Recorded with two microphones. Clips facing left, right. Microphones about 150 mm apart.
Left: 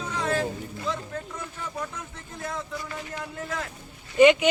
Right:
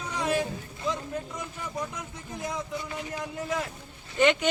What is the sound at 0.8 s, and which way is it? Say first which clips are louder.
Speech: right 1 dB; 15° right (ahead or behind).